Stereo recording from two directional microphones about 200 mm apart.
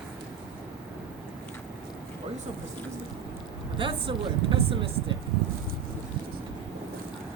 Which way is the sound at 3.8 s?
25° right (ahead or behind).